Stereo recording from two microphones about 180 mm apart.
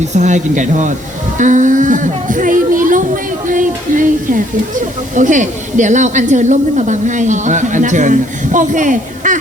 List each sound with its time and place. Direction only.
0.1 s speech: 40° right (ahead or behind)